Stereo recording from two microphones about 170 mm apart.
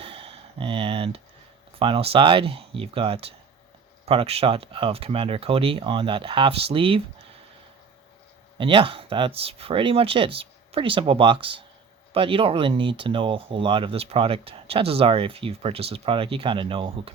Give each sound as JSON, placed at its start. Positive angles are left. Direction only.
{"t": 0.0, "sound": "a sound", "side_deg": -35}
{"t": 1.8, "sound": "speech", "side_deg": -35}
{"t": 8.5, "sound": "speech", "side_deg": -30}